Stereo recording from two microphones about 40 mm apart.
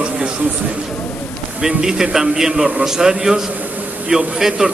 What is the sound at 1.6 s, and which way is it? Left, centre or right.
A man's voice, centre.